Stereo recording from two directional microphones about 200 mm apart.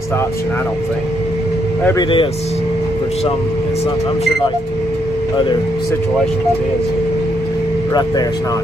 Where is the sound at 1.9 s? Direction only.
20° left (ahead or behind).